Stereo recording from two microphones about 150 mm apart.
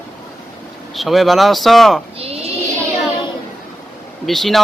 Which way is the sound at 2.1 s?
40° right (ahead or behind).